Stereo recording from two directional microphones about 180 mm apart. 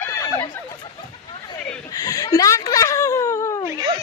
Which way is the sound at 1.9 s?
20° left (ahead or behind).